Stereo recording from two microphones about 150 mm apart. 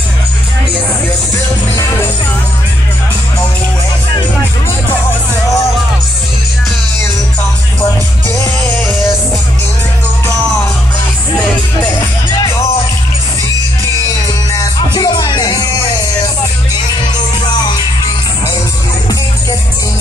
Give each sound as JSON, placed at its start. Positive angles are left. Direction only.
{"t": 14.5, "sound": "music", "side_deg": 30}